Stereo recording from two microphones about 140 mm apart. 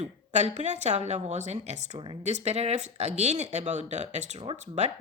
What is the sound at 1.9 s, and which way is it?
Speech, 35° right (ahead or behind).